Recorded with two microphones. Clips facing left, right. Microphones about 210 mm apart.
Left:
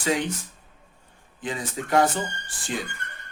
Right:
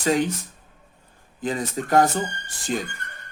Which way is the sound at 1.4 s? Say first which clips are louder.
Right 5 dB; 40° right (ahead or behind).